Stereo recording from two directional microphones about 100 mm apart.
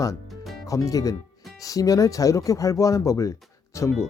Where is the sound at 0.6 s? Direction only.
35° left (ahead or behind).